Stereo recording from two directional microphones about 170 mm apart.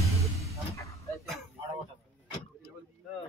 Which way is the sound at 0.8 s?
20° left (ahead or behind).